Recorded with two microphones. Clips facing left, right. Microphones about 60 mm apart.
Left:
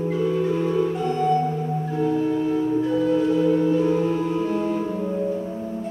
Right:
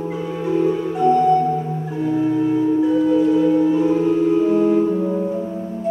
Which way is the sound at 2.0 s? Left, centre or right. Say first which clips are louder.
Right 5 dB; centre.